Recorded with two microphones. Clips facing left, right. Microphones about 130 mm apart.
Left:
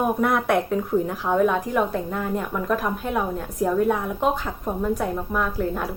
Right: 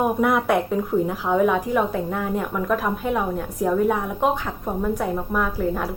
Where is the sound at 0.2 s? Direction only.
5° right (ahead or behind).